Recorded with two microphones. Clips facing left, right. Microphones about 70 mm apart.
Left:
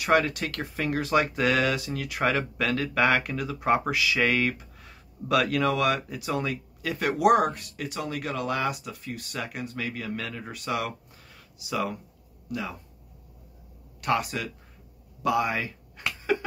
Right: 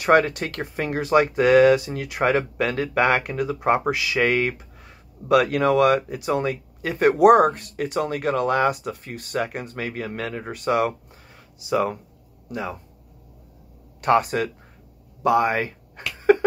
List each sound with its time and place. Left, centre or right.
0.0 s speech: right
14.0 s speech: right
16.2 s a sound: right